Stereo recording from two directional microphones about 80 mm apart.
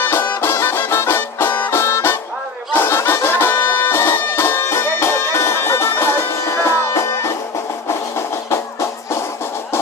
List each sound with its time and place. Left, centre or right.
0.0 s music: left
8.4 s music: left